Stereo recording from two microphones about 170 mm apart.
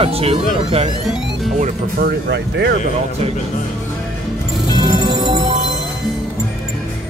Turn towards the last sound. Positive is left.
turn(degrees=-25)  # may be behind; listen again after turning